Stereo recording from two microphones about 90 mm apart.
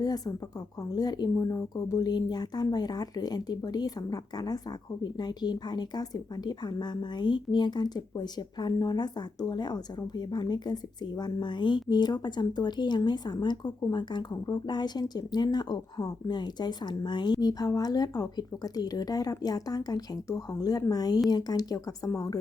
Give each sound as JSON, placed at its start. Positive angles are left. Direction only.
{"t": 0.0, "sound": "a woman's voice", "side_deg": 45}